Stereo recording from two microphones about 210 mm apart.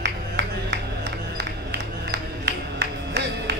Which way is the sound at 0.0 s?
55° right (ahead or behind).